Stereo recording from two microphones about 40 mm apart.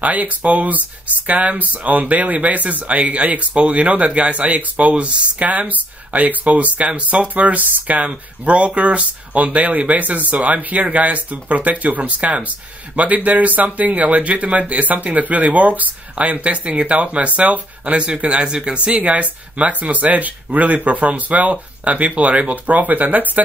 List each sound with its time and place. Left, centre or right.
0.0 s speech: right
18.9 s speech: right